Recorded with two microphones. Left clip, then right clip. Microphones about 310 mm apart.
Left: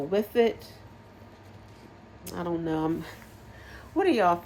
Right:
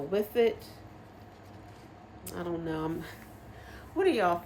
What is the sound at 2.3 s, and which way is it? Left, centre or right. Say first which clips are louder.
Speech: left 5 dB; left.